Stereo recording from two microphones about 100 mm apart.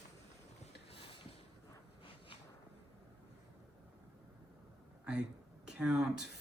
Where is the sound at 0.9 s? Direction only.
70° left (ahead or behind).